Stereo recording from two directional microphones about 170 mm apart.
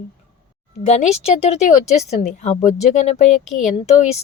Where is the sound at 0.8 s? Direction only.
40° left (ahead or behind).